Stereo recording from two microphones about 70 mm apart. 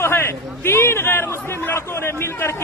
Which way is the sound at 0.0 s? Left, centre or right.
Left.